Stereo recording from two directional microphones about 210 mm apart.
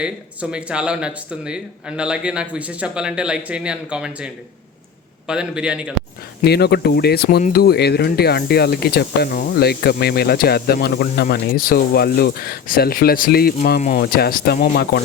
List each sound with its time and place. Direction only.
0.5 s speech: 5° right (ahead or behind)
5.3 s speech: 5° right (ahead or behind)
6.4 s speech: 50° left (ahead or behind)